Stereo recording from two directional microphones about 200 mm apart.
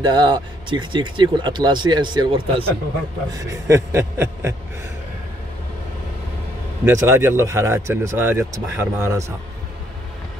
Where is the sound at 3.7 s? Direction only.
15° right (ahead or behind).